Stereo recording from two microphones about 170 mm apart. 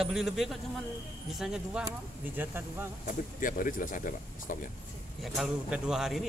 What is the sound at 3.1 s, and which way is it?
Speech, 55° left (ahead or behind).